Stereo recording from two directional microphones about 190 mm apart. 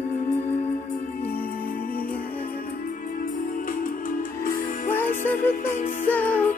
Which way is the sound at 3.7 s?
50° left (ahead or behind).